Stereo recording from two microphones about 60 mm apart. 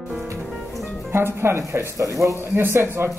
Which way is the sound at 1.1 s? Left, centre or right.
Right.